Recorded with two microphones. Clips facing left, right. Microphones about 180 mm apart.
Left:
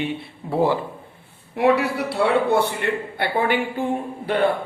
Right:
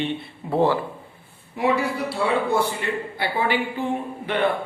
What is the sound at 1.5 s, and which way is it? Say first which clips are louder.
A man's voice: left 4 dB; 65° left (ahead or behind).